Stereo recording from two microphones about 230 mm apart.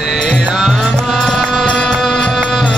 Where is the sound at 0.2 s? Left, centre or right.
Centre.